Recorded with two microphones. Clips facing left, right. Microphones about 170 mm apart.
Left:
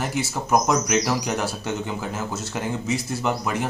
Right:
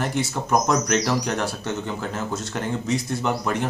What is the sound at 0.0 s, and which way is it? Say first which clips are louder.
Speech: right 1 dB; 5° left (ahead or behind).